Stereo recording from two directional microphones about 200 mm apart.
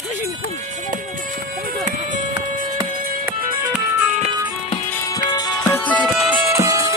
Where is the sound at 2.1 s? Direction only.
40° right (ahead or behind).